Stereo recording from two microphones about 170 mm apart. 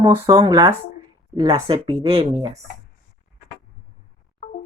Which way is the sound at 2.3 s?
40° right (ahead or behind).